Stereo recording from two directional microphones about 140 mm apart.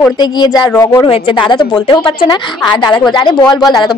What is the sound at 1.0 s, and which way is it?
A woman's voice, 35° left (ahead or behind).